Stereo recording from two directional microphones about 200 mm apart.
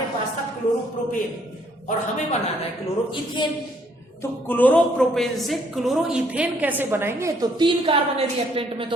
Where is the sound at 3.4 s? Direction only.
25° left (ahead or behind).